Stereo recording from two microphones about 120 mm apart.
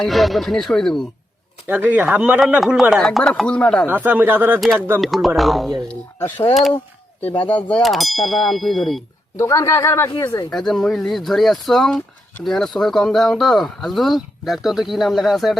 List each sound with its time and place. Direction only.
0.0 s speech: centre (ahead or behind)
1.6 s speech: 15° right (ahead or behind); by 3.8 s 10° left (ahead or behind)
3.8 s speech: 15° right (ahead or behind)
4.9 s speech: centre (ahead or behind)
7.4 s speech: 10° left (ahead or behind)
7.8 s speech: centre (ahead or behind)
9.4 s a man's voice: 25° left (ahead or behind)
10.5 s speech: centre (ahead or behind)